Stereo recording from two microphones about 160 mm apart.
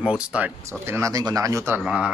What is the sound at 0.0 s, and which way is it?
Speech, 5° right (ahead or behind).